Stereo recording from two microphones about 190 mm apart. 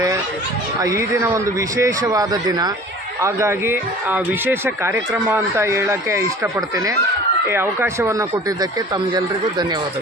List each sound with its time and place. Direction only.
0.8 s speech: 15° right (ahead or behind)